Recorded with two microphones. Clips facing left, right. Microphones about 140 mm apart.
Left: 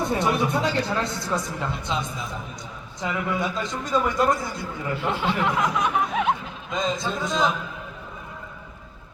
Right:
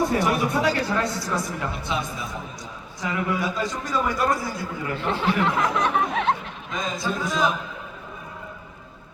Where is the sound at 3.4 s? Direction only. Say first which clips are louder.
Right 1 dB; 20° left (ahead or behind).